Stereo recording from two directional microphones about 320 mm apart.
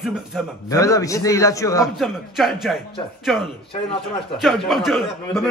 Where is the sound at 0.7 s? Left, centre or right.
Centre.